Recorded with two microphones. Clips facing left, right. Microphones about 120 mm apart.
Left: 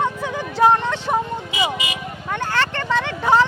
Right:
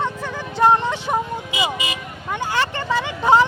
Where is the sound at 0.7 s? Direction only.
15° right (ahead or behind).